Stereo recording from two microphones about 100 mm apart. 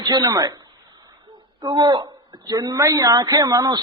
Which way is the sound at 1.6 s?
50° right (ahead or behind).